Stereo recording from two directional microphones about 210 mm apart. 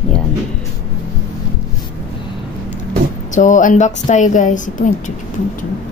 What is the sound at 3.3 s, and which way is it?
A woman's voice, 35° left (ahead or behind).